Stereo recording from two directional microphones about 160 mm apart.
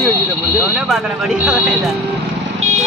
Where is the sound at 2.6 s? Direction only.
45° right (ahead or behind).